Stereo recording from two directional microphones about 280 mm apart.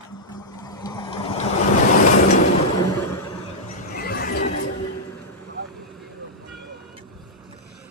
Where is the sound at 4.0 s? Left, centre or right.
Left.